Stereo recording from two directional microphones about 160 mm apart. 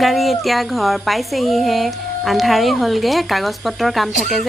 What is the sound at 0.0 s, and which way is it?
Speech, centre (ahead or behind).